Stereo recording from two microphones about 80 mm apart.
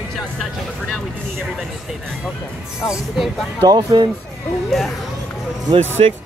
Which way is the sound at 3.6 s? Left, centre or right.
Right.